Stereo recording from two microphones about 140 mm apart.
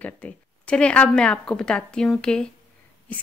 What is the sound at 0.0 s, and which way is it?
Speech, 10° left (ahead or behind).